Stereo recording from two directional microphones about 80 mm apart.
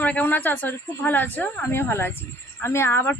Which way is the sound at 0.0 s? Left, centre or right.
Left.